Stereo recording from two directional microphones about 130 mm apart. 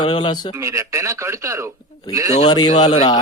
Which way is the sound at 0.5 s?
20° right (ahead or behind).